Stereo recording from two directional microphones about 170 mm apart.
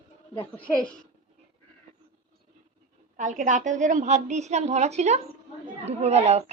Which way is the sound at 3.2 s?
45° right (ahead or behind).